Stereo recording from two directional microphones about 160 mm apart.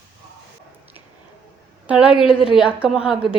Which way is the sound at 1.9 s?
5° right (ahead or behind).